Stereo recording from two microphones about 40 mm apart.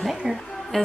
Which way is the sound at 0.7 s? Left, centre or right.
Centre.